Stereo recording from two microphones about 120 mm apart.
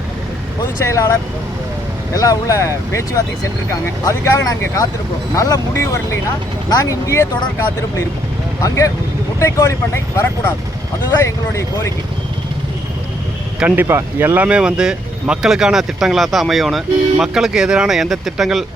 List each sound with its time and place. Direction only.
0.9 s speech: 25° left (ahead or behind)
2.1 s speech: 30° left (ahead or behind)
8.6 s speech: 25° left (ahead or behind)
11.2 s speech: 25° left (ahead or behind)
13.6 s speech: 15° right (ahead or behind)